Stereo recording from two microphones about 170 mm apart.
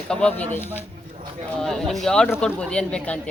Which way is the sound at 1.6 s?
Centre (ahead or behind).